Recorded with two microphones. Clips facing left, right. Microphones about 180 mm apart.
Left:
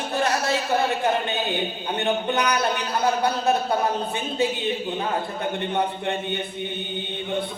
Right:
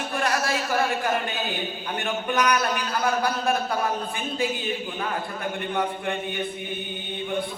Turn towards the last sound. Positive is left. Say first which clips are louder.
# left 2 dB
turn(degrees=25)  # may be behind; listen again after turning